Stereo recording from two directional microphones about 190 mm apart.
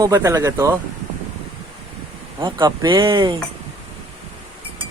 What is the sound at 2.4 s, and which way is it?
Speech, 25° right (ahead or behind).